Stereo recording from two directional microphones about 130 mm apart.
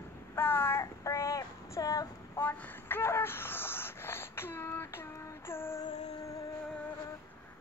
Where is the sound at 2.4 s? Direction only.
20° left (ahead or behind).